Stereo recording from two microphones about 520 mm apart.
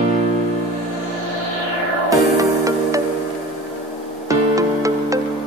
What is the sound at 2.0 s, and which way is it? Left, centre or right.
Music, centre.